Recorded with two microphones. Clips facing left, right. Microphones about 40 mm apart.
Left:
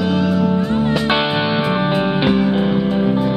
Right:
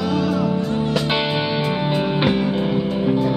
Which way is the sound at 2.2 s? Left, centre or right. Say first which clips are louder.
Left 3 dB; centre.